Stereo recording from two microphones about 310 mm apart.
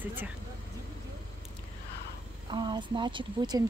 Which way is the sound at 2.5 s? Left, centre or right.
Centre.